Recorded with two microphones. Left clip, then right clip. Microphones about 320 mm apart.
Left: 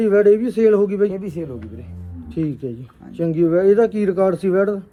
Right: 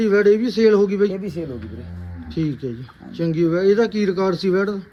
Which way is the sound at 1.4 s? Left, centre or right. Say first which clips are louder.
Even; left.